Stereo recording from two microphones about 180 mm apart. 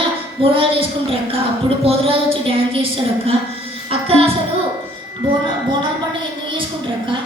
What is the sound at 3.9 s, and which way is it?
Music, 30° right (ahead or behind).